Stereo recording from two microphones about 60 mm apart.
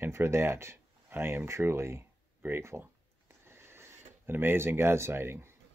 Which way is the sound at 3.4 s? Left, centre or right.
Right.